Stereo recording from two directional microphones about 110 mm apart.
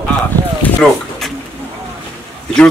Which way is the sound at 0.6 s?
5° left (ahead or behind).